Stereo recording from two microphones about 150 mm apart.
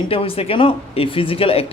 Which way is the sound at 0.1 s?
40° left (ahead or behind).